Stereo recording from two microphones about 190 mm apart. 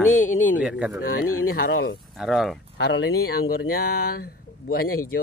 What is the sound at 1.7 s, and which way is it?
Speech, 55° left (ahead or behind).